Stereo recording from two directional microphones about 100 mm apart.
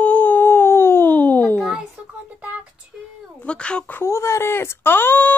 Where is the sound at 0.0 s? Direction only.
15° left (ahead or behind).